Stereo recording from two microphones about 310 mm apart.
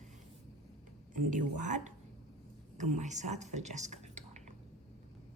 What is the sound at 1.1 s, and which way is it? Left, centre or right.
A woman's voice, right.